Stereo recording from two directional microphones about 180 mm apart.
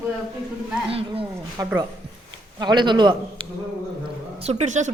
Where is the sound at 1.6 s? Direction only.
20° right (ahead or behind).